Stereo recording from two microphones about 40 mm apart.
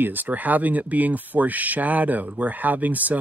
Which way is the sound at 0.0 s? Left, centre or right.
Right.